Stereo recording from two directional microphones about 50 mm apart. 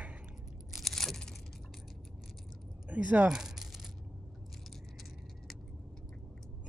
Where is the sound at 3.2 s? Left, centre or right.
Centre.